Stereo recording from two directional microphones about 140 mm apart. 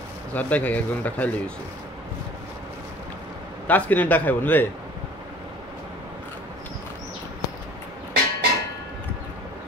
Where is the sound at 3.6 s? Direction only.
10° left (ahead or behind).